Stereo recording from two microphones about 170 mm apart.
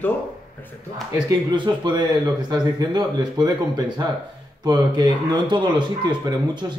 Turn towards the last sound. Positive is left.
turn(degrees=-25)  # may be behind; listen again after turning